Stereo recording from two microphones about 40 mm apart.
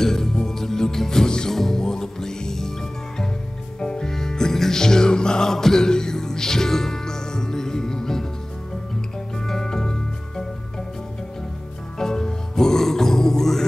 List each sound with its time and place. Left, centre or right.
0.0 s music: centre
3.8 s music: left
9.5 s music: centre
12.0 s music: centre